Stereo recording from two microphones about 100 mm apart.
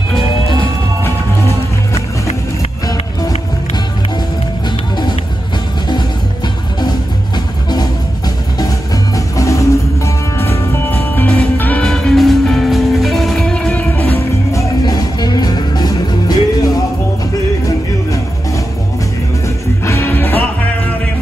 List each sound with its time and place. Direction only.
9.1 s music: 30° left (ahead or behind); by 11.8 s 15° left (ahead or behind)
11.8 s music: 5° left (ahead or behind)
14.5 s music: 35° left (ahead or behind)
19.9 s music: 20° left (ahead or behind)